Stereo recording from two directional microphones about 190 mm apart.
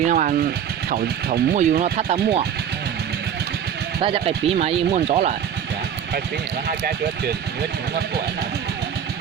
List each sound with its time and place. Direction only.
0.0 s speech: 40° right (ahead or behind)
4.0 s speech: 30° right (ahead or behind)
6.7 s speech: 55° right (ahead or behind)